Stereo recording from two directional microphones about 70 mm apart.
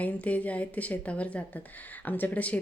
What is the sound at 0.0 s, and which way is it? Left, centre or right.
A woman's voice, left.